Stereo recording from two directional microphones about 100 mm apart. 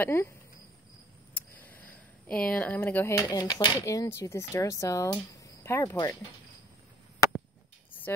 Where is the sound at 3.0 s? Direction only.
30° left (ahead or behind).